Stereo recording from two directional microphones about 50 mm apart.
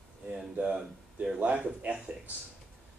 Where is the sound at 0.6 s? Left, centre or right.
Right.